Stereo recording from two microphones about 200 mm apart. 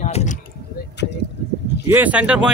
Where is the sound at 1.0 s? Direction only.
60° left (ahead or behind).